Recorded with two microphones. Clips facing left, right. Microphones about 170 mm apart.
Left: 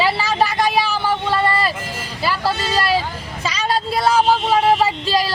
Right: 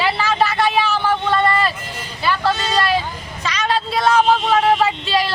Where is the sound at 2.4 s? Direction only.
10° left (ahead or behind).